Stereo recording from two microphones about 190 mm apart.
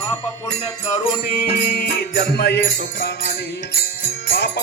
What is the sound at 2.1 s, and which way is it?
Music, 55° left (ahead or behind).